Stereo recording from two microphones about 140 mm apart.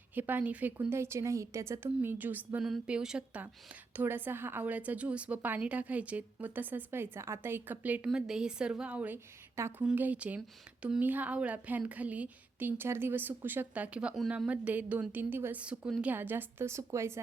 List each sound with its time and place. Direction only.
0.1 s a woman's voice: 15° right (ahead or behind)